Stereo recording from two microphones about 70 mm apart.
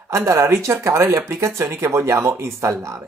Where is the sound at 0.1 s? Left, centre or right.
Right.